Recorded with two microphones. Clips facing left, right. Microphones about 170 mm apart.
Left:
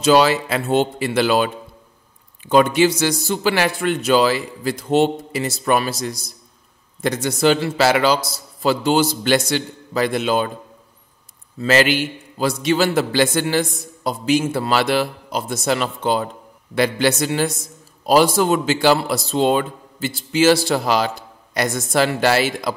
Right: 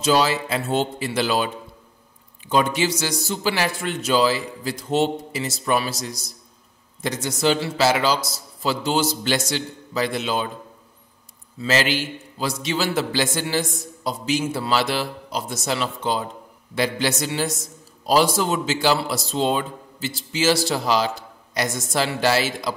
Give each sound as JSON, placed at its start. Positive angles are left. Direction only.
{"t": 0.0, "sound": "a man's voice", "side_deg": 65}
{"t": 11.5, "sound": "a man's voice", "side_deg": 60}